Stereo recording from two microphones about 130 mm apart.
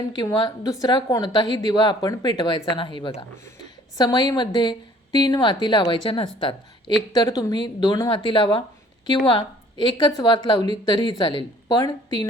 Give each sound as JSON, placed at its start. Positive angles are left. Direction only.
{"t": 0.3, "sound": "a woman's voice", "side_deg": 30}
{"t": 8.1, "sound": "a woman's voice", "side_deg": 40}